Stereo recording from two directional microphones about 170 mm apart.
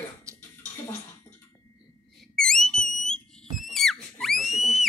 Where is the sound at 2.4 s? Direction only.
5° left (ahead or behind).